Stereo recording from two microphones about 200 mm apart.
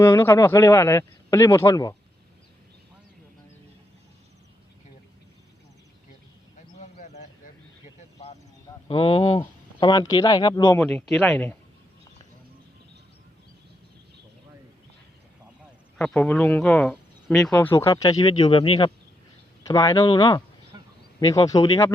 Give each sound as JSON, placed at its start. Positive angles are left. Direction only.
{"t": 0.0, "sound": "speech", "side_deg": 10}
{"t": 6.7, "sound": "a sound", "side_deg": 35}
{"t": 8.9, "sound": "speech", "side_deg": 30}
{"t": 10.8, "sound": "speech", "side_deg": 0}
{"t": 16.0, "sound": "speech", "side_deg": 5}
{"t": 17.7, "sound": "speech", "side_deg": 15}